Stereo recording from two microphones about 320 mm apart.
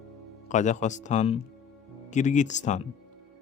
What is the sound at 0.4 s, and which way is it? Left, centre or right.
Speech, left.